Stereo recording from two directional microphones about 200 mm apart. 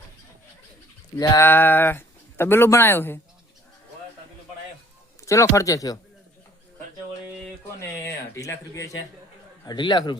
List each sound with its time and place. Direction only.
1.1 s speech: 15° left (ahead or behind)
5.2 s speech: 15° left (ahead or behind)
7.8 s a man's voice: 15° left (ahead or behind)